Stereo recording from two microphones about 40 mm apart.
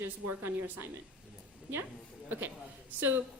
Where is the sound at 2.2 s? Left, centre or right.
Right.